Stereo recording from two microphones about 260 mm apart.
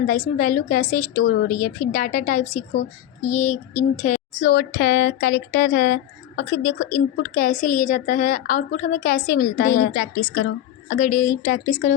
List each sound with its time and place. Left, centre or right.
0.0 s speech: left